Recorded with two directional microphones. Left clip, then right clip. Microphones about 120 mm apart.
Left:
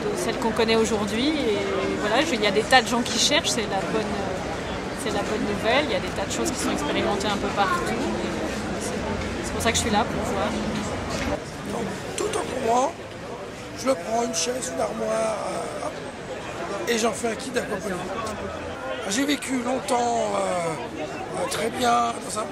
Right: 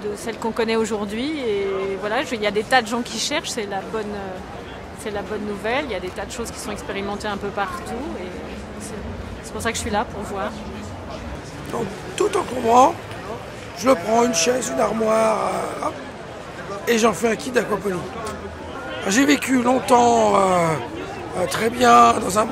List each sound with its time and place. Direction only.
0.3 s speech: 40° right (ahead or behind)
5.7 s speech: 35° right (ahead or behind)
9.6 s speech: 40° right (ahead or behind)
12.2 s a man's voice: 45° right (ahead or behind)
19.0 s a man's voice: 45° right (ahead or behind)